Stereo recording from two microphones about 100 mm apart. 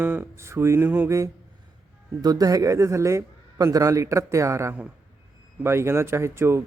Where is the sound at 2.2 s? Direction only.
40° right (ahead or behind).